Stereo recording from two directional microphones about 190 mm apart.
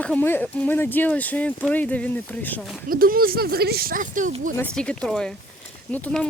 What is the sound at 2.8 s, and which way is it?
Speech, 50° right (ahead or behind).